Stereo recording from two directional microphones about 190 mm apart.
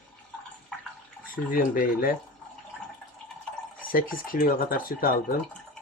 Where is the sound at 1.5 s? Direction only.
50° left (ahead or behind).